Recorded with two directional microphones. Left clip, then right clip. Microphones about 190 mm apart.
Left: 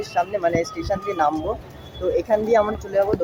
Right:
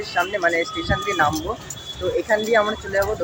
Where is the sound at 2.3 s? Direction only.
5° left (ahead or behind).